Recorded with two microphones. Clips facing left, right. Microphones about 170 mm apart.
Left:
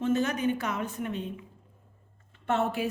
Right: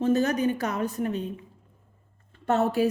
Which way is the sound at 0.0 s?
40° right (ahead or behind).